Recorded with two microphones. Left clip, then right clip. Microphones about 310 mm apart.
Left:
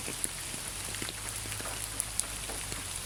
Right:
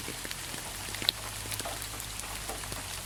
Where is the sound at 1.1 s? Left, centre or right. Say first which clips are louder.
Right 11 dB; right.